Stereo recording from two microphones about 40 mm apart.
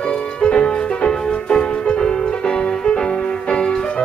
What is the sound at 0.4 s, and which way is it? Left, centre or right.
Music, left.